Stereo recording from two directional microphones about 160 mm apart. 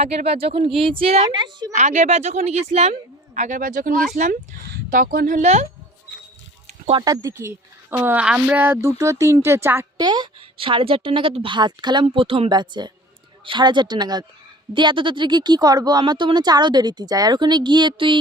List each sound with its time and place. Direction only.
0.3 s speech: 40° right (ahead or behind)
1.7 s speech: 50° right (ahead or behind)
7.0 s speech: 20° right (ahead or behind)
10.0 s speech: 25° right (ahead or behind)